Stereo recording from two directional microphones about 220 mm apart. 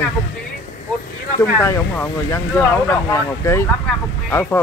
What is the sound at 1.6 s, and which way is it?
Speech, 10° left (ahead or behind).